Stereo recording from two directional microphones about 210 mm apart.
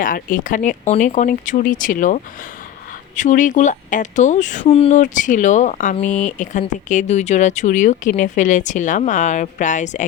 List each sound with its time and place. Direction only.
0.0 s speech: 40° left (ahead or behind)